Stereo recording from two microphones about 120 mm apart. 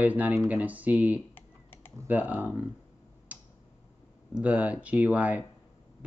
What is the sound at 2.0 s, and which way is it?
Speech, 15° right (ahead or behind).